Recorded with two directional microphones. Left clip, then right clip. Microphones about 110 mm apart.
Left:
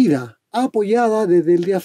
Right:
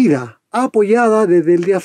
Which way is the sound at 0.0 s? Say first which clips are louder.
Right 3 dB; 30° left (ahead or behind).